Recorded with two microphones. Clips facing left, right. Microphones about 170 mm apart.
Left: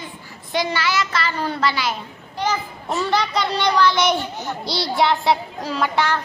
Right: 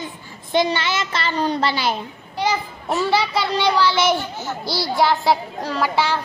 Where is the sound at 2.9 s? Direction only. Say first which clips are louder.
Right 2 dB; 5° right (ahead or behind).